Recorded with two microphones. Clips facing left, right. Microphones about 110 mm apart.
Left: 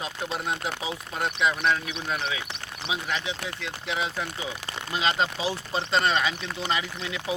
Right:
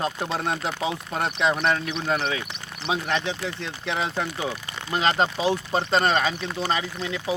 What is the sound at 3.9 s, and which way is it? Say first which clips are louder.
Speech: right 3 dB; 30° right (ahead or behind).